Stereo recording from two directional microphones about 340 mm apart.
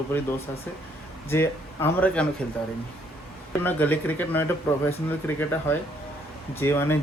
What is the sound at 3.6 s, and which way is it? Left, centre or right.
Speech, centre.